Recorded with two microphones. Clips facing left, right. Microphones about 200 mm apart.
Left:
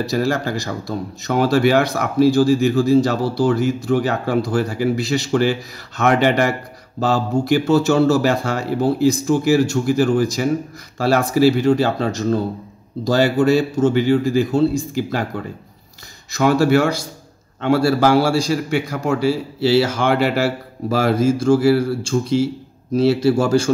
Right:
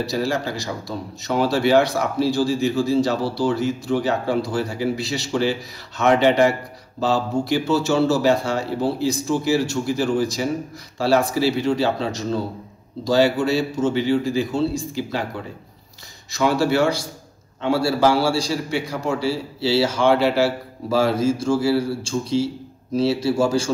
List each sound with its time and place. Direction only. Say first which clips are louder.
0.0 s speech: left 3 dB; 50° left (ahead or behind)